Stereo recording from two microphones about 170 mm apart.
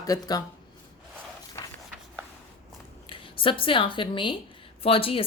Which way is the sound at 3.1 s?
30° left (ahead or behind).